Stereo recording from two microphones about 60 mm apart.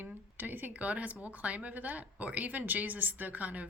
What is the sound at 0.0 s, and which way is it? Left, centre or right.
Speech, right.